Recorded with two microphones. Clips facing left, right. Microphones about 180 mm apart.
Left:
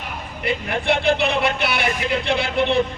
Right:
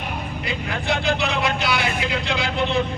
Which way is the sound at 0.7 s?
30° left (ahead or behind).